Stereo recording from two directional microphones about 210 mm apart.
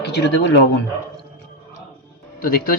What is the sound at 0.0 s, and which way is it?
Speech, 55° left (ahead or behind).